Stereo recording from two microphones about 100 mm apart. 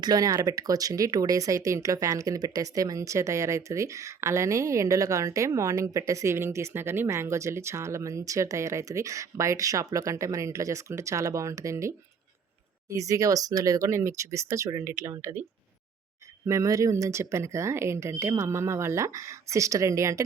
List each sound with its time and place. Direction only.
0.0 s speech: 40° right (ahead or behind); by 15.4 s 25° right (ahead or behind)
16.5 s speech: 35° right (ahead or behind)